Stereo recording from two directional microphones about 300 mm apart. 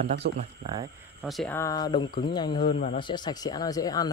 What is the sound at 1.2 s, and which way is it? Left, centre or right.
Speech, centre.